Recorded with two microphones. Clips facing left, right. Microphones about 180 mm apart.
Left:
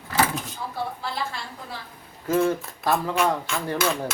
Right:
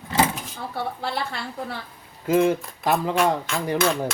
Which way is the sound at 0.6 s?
65° right (ahead or behind).